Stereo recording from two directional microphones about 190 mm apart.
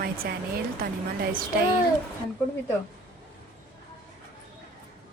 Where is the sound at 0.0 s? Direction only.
50° right (ahead or behind).